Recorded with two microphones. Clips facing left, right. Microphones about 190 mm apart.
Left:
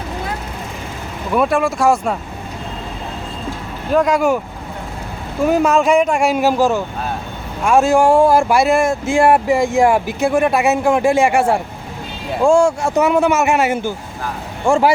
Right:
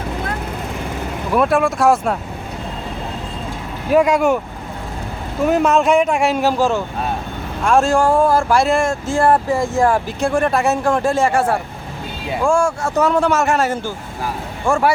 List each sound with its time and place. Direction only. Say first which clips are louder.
1.3 s speech: even; centre (ahead or behind)
3.9 s speech: right 1 dB; centre (ahead or behind)
5.5 s speech: left 1 dB; centre (ahead or behind)
7.6 s speech: left 2 dB; 5° left (ahead or behind)